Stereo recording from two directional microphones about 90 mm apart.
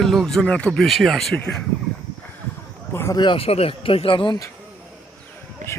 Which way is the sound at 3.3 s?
90° left.